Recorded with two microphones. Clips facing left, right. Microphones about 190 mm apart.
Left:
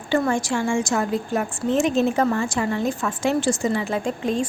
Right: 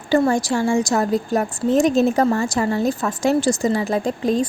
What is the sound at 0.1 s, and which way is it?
A woman's voice, 40° right (ahead or behind).